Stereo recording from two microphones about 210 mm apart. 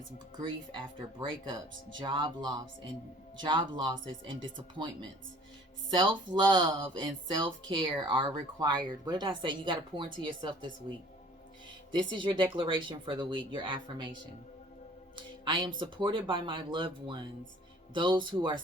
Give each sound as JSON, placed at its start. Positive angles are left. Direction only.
{"t": 0.4, "sound": "speech", "side_deg": -25}
{"t": 11.9, "sound": "speech", "side_deg": -25}
{"t": 15.1, "sound": "speech", "side_deg": -20}